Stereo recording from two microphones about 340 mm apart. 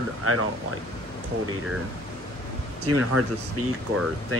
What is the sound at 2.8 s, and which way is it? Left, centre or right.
Speech, right.